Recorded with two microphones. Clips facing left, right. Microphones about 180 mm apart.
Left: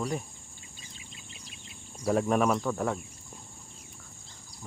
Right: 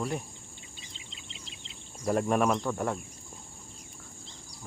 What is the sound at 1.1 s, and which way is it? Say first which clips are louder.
Insect: right 1 dB; 25° right (ahead or behind).